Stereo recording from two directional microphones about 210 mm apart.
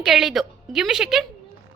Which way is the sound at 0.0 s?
Centre (ahead or behind).